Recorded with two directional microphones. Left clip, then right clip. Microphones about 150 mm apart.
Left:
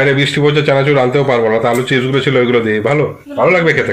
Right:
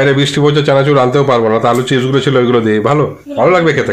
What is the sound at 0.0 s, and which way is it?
A man's voice, 20° right (ahead or behind).